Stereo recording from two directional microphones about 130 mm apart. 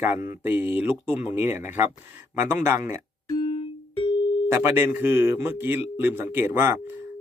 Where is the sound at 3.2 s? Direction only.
35° left (ahead or behind).